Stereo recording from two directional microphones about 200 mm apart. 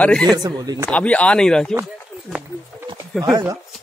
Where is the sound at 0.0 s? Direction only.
5° left (ahead or behind).